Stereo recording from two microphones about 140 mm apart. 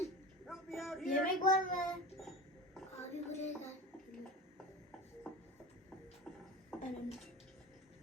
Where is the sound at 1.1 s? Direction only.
90° left.